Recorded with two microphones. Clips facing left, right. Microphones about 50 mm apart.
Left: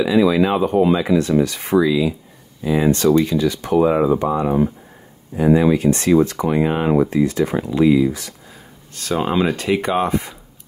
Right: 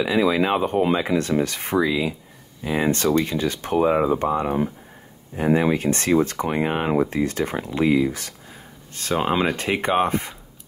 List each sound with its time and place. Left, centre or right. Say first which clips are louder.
0.0 s speech: left 4 dB; right
3.9 s speech: left 3 dB; centre
4.2 s speech: left 4 dB; right
8.9 s speech: left 2 dB; right
9.2 s speech: left 3 dB; centre
9.6 s speech: left 2 dB; right